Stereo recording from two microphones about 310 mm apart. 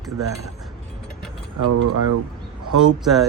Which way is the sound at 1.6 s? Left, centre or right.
Right.